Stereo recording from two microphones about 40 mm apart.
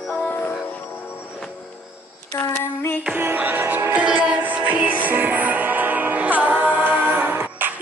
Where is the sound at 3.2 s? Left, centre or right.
Right.